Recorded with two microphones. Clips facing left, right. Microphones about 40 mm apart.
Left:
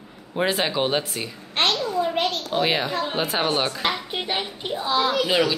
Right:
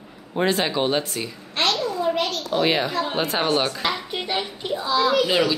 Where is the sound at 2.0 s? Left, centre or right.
Left.